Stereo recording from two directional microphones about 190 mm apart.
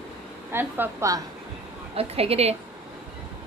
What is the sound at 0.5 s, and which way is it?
Speech, 15° right (ahead or behind).